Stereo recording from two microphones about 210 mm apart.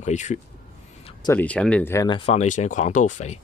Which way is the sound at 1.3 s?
5° left (ahead or behind).